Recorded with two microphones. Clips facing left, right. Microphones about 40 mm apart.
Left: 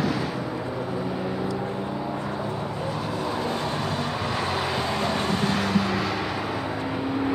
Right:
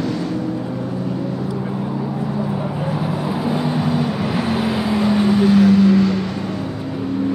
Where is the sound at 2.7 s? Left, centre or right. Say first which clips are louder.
Right 6 dB; centre.